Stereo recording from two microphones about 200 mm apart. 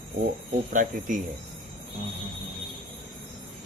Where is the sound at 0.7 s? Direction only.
40° right (ahead or behind).